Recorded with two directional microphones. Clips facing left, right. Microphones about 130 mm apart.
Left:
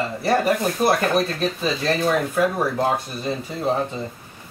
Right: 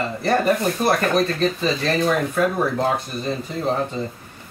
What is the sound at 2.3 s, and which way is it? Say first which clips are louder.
Speech: even; 5° left (ahead or behind).